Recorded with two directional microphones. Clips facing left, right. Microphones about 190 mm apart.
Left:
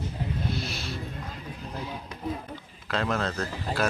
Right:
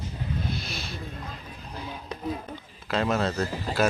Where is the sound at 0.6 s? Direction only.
35° left (ahead or behind).